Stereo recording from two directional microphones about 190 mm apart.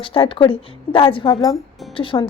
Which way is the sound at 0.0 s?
30° left (ahead or behind).